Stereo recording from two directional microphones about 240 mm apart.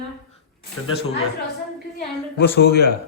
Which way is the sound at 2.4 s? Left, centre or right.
Left.